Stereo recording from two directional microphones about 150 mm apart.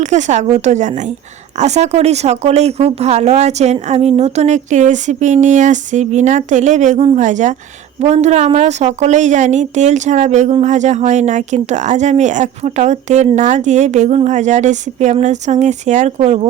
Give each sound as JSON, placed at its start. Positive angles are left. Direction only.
{"t": 0.0, "sound": "a woman's voice", "side_deg": -50}